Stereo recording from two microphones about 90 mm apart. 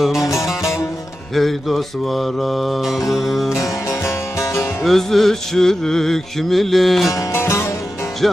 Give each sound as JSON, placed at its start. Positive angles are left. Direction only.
{"t": 0.2, "sound": "music", "side_deg": 35}
{"t": 1.4, "sound": "music", "side_deg": 0}
{"t": 3.5, "sound": "music", "side_deg": 30}
{"t": 4.8, "sound": "music", "side_deg": 0}
{"t": 7.3, "sound": "music", "side_deg": 30}
{"t": 8.2, "sound": "music", "side_deg": 0}